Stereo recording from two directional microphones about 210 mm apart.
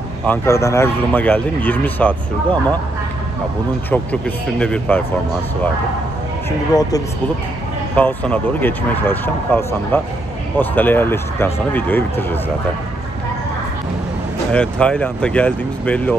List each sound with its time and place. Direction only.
0.3 s speech: 15° left (ahead or behind)
3.9 s speech: 5° left (ahead or behind)
6.7 s speech: 15° left (ahead or behind)
7.9 s speech: 5° left (ahead or behind)
14.5 s speech: 5° left (ahead or behind)